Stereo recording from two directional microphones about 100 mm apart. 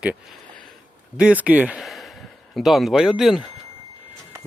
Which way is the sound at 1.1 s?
10° right (ahead or behind).